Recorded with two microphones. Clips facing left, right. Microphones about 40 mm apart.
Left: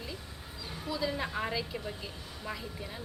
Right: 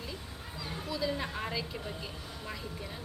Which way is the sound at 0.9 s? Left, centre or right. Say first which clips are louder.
Left 1 dB; centre.